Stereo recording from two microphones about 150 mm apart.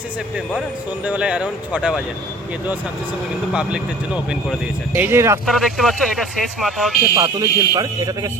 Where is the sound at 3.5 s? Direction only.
5° right (ahead or behind).